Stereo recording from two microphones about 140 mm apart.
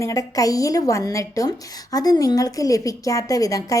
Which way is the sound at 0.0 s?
25° left (ahead or behind).